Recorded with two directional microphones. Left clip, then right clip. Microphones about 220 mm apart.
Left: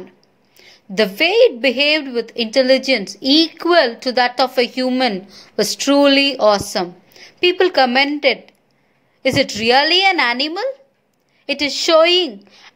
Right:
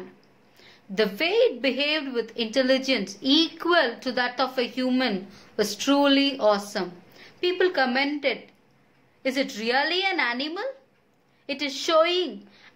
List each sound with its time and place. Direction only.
0.6 s a woman's voice: 30° left (ahead or behind)